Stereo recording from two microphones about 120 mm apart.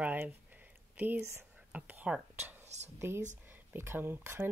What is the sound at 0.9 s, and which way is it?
Speech, 10° right (ahead or behind).